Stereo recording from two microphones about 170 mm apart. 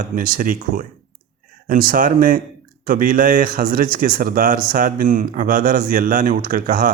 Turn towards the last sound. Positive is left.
turn(degrees=-55)  # may be behind; listen again after turning